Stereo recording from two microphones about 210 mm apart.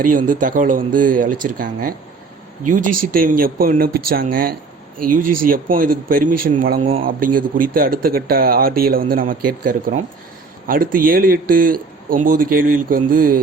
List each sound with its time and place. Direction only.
0.0 s speech: 40° right (ahead or behind)
6.8 s speech: 25° right (ahead or behind)
7.3 s speech: 40° right (ahead or behind)